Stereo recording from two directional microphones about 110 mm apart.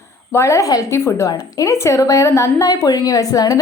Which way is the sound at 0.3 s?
25° left (ahead or behind).